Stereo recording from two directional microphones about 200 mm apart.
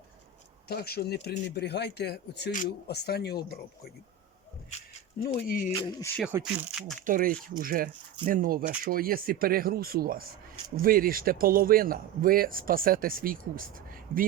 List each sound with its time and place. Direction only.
0.7 s a man's voice: 50° left (ahead or behind)
5.4 s speech: 45° left (ahead or behind)
5.7 s speech: 15° left (ahead or behind)
6.2 s speech: 5° right (ahead or behind)
7.0 s speech: 45° right (ahead or behind)